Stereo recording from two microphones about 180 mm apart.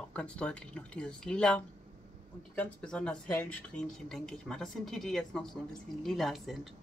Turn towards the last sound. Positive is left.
turn(degrees=0)  # may be behind; listen again after turning